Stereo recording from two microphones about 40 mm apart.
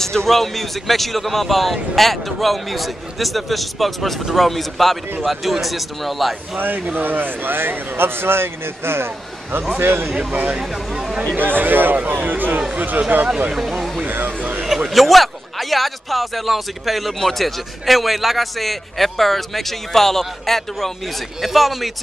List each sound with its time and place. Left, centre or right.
0.0 s speech: centre
6.6 s a man's voice: right
9.8 s a man's voice: right
10.1 s speech: right
11.3 s a man's voice: right
13.6 s speech: centre
14.0 s speech: right
14.9 s speech: centre
21.4 s speech: centre